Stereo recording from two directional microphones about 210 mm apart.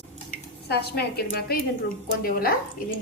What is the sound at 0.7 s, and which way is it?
Speech, 50° left (ahead or behind).